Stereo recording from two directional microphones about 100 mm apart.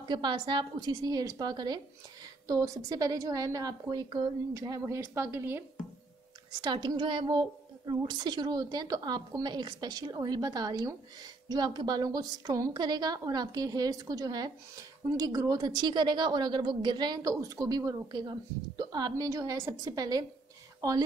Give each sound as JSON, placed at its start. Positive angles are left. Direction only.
{"t": 0.1, "sound": "a woman's voice", "side_deg": -50}
{"t": 4.6, "sound": "a woman's voice", "side_deg": -35}
{"t": 6.6, "sound": "a woman's voice", "side_deg": -45}